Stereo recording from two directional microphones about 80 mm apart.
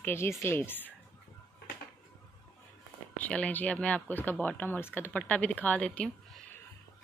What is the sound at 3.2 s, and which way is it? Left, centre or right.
Speech, centre.